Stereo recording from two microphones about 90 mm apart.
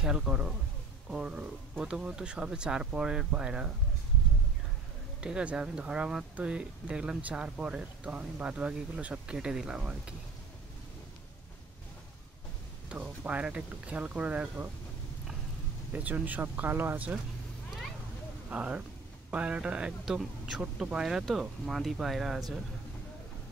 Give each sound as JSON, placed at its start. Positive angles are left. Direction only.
{"t": 0.0, "sound": "speech", "side_deg": -10}
{"t": 5.2, "sound": "speech", "side_deg": -10}
{"t": 12.9, "sound": "speech", "side_deg": -15}
{"t": 15.9, "sound": "speech", "side_deg": -15}
{"t": 18.5, "sound": "speech", "side_deg": -15}